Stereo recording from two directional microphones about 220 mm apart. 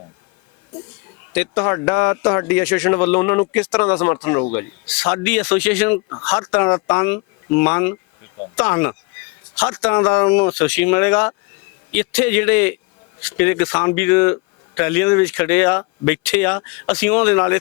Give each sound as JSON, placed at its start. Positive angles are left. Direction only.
{"t": 1.3, "sound": "speech", "side_deg": 10}